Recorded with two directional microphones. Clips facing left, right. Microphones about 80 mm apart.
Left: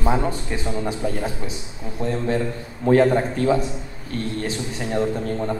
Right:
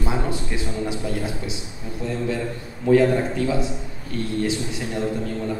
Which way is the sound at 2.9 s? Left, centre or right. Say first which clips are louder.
Even; left.